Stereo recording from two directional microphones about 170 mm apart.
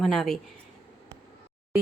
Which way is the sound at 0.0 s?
Centre (ahead or behind).